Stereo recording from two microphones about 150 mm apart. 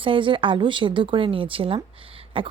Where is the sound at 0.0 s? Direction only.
35° right (ahead or behind).